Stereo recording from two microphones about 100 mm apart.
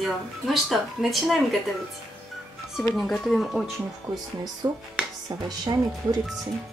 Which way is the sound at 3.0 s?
5° left (ahead or behind).